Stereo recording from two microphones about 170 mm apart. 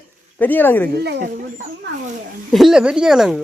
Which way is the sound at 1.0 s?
80° right.